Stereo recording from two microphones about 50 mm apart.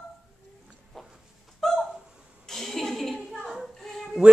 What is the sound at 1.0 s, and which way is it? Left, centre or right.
Chicken, centre.